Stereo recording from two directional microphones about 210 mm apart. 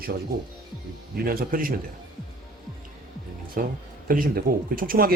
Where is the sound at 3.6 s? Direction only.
45° right (ahead or behind).